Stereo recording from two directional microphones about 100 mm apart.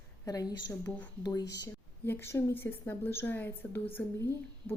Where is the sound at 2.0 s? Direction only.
25° left (ahead or behind).